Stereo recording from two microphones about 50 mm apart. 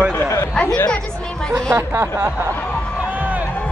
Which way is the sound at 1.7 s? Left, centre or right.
Right.